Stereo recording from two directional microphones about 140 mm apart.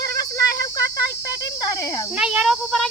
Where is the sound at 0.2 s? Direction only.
25° left (ahead or behind).